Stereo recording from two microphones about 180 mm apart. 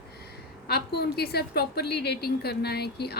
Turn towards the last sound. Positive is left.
turn(degrees=65)  # may be behind; listen again after turning